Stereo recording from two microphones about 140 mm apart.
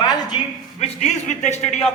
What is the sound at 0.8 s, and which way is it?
Speech, 55° left (ahead or behind).